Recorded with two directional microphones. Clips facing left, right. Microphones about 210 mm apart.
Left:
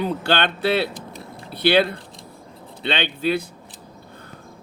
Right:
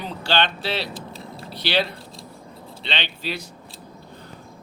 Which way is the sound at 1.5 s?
55° left (ahead or behind).